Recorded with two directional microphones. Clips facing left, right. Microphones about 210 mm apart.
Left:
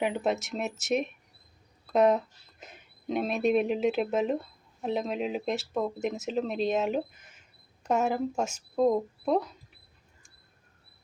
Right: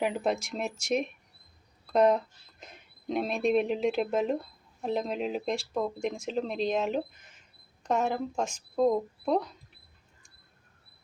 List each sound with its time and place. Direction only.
0.0 s speech: centre (ahead or behind)